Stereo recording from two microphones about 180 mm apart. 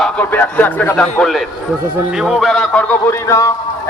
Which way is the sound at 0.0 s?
10° left (ahead or behind).